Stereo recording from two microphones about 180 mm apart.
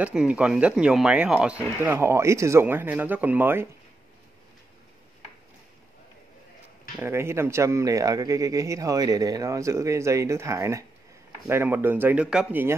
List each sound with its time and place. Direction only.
0.0 s speech: 5° right (ahead or behind)
7.0 s speech: 15° right (ahead or behind)